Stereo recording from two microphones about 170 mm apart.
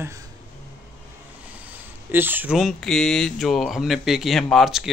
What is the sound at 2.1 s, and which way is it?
Speech, 10° right (ahead or behind).